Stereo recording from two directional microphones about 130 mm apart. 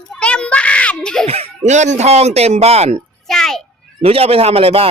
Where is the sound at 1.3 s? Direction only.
55° right (ahead or behind).